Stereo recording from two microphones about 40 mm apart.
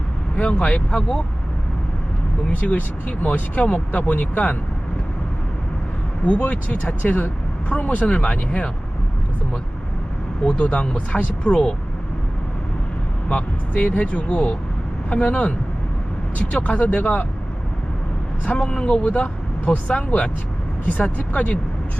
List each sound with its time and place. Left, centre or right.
0.3 s speech: left
2.5 s speech: left
6.2 s speech: left
10.4 s speech: left
13.2 s speech: left
17.0 s speech: left
18.7 s speech: left
19.0 s speech: left